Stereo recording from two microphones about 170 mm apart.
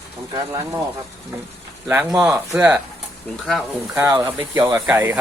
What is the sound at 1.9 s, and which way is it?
Speech, 5° right (ahead or behind).